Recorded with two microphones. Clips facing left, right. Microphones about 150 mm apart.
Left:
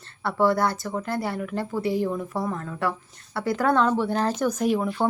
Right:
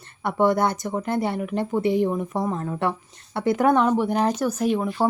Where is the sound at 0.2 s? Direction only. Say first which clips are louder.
Right 2 dB; 20° right (ahead or behind).